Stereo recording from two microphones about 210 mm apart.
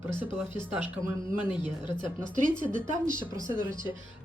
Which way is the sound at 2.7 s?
40° right (ahead or behind).